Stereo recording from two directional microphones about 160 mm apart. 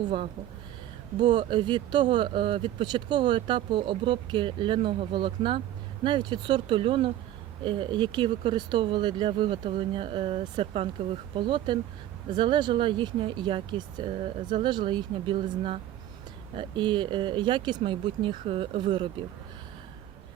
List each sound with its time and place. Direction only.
1.2 s speech: 30° right (ahead or behind)